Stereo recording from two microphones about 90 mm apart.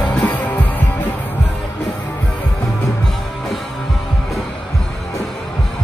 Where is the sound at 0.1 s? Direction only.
15° left (ahead or behind).